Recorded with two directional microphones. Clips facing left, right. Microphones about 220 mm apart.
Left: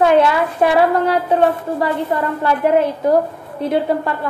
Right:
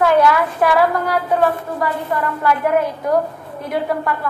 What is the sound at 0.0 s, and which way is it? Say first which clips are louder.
A woman's voice: left 1 dB; 25° left (ahead or behind).